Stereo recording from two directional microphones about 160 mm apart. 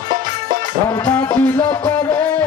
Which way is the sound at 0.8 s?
20° left (ahead or behind).